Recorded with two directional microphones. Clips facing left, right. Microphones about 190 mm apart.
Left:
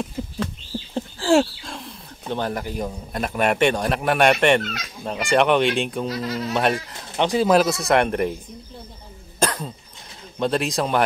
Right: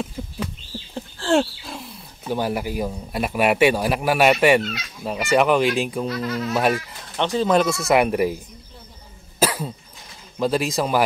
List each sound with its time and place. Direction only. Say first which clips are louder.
1.2 s roaring cats: left 2 dB; 5° left (ahead or behind)
1.6 s speech: even; 5° right (ahead or behind)
6.0 s speech: right 1 dB; 35° left (ahead or behind)
6.5 s speech: right 1 dB; 5° right (ahead or behind)
7.2 s speech: left 1 dB; 10° left (ahead or behind); by 8.4 s 5° right (ahead or behind)
9.4 s cough: right 2 dB; 5° right (ahead or behind)
10.4 s speech: right 1 dB; centre (ahead or behind)